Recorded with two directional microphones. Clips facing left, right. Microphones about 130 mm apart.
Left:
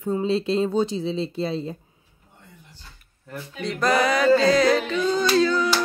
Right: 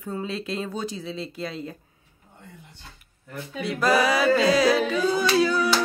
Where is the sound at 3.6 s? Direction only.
5° right (ahead or behind).